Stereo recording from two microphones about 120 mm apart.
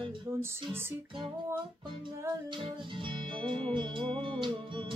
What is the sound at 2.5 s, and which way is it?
Music, 45° right (ahead or behind).